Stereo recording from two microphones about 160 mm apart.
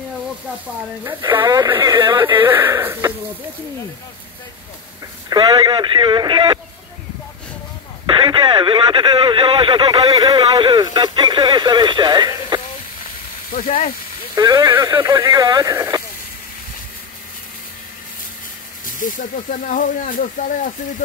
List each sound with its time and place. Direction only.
1.2 s speech: 30° right (ahead or behind)
2.4 s speech: 15° right (ahead or behind)
5.3 s speech: 25° right (ahead or behind)
8.1 s speech: 30° right (ahead or behind)
13.0 s hiss: 55° left (ahead or behind)
14.3 s speech: 25° right (ahead or behind)
18.9 s speech: 55° left (ahead or behind)